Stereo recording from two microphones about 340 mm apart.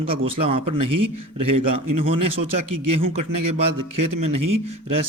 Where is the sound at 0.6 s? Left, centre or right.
Right.